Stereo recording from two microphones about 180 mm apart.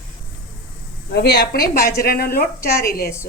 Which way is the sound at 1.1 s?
65° left (ahead or behind).